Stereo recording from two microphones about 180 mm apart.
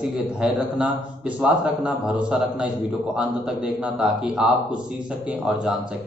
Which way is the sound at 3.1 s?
5° right (ahead or behind).